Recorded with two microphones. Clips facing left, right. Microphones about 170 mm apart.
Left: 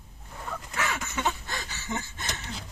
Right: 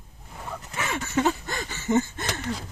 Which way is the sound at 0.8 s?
30° right (ahead or behind).